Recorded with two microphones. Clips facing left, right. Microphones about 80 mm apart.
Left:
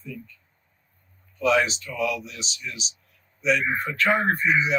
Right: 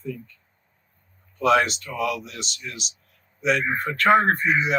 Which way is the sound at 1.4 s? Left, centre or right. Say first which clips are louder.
Right 2 dB; right.